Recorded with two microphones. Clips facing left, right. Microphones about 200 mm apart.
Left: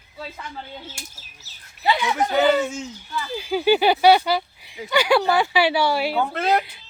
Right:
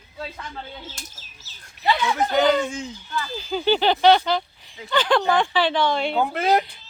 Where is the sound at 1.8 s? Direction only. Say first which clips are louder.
Even; 5° left (ahead or behind).